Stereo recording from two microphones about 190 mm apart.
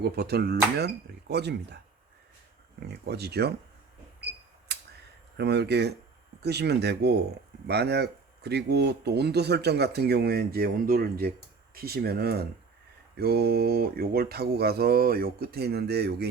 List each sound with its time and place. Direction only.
0.0 s speech: 55° right (ahead or behind)
2.9 s speech: 60° right (ahead or behind)
5.4 s speech: 60° right (ahead or behind)